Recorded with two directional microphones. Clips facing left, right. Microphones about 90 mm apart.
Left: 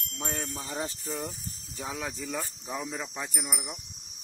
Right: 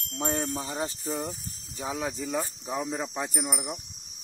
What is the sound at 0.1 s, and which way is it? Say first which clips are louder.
Wind chime: right 6 dB; 30° right (ahead or behind).